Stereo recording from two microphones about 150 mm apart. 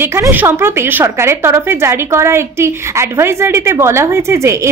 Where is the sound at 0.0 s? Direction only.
15° right (ahead or behind).